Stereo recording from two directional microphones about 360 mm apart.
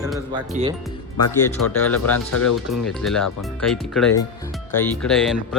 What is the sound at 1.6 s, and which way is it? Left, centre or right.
Speech, left.